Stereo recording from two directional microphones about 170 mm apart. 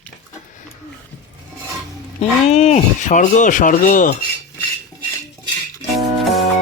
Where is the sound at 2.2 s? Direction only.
40° left (ahead or behind).